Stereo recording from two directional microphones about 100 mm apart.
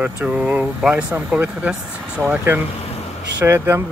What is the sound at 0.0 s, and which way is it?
Speech, 15° right (ahead or behind).